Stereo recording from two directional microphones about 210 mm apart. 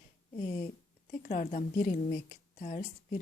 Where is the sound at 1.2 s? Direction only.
40° left (ahead or behind).